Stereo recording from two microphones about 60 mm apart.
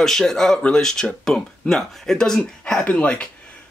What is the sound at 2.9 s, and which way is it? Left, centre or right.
Speech, left.